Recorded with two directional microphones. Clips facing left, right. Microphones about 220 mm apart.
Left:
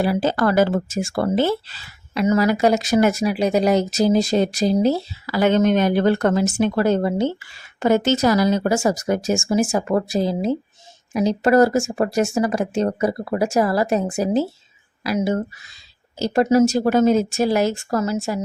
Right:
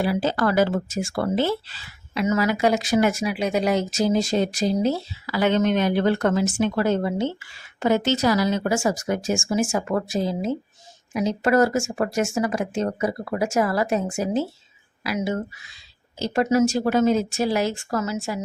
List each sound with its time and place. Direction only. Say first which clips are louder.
0.0 s speech: left 3 dB; 45° left (ahead or behind)